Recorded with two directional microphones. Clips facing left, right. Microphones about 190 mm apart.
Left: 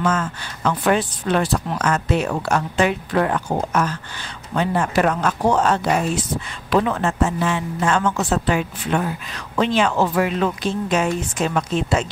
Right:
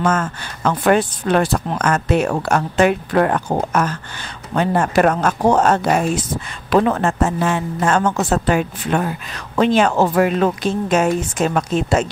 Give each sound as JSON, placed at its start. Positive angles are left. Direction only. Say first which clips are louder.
{"t": 0.0, "sound": "speech", "louder": "right 3 dB", "side_deg": -50}